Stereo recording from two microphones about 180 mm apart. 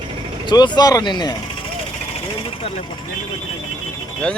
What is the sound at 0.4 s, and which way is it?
Speech, 25° left (ahead or behind).